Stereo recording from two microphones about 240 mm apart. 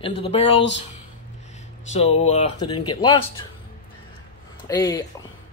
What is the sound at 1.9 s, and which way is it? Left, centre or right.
Speech, left.